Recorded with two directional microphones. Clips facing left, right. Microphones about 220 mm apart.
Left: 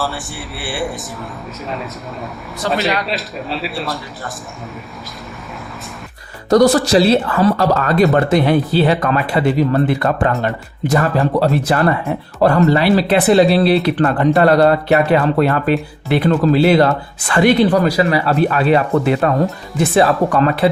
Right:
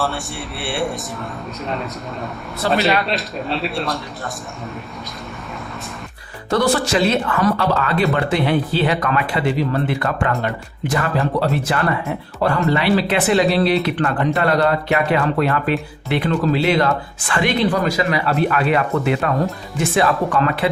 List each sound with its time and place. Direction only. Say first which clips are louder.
0.6 s a man's voice: even; centre (ahead or behind)
6.5 s speech: left 7 dB; 40° left (ahead or behind)